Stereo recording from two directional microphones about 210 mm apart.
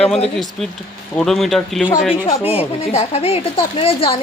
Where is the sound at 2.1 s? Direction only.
25° left (ahead or behind).